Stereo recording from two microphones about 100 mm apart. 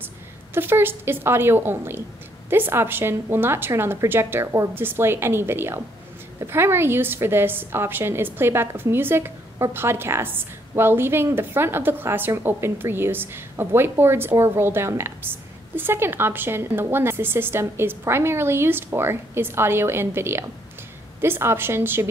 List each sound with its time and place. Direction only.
0.6 s a woman's voice: 20° right (ahead or behind)